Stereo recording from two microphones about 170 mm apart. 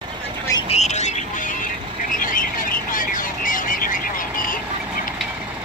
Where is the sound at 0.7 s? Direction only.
40° left (ahead or behind).